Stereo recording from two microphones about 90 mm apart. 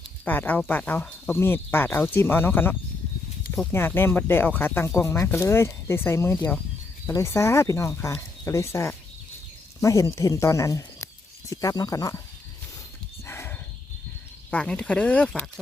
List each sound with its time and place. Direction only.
0.3 s speech: 20° left (ahead or behind); by 12.2 s 40° left (ahead or behind)
13.2 s horse: 30° left (ahead or behind)
14.5 s speech: 10° left (ahead or behind)